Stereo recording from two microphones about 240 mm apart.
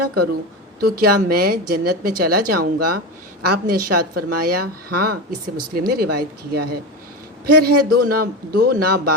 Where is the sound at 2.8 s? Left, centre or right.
Right.